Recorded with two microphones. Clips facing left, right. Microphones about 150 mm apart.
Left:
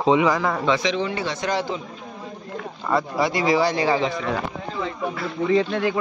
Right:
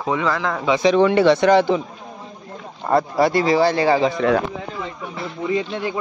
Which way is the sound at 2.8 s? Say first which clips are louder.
Right 5 dB; 40° right (ahead or behind).